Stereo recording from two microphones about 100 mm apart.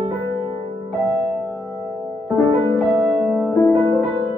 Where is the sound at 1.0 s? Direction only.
5° right (ahead or behind).